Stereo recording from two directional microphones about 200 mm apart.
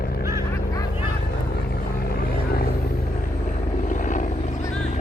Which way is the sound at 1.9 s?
50° left (ahead or behind).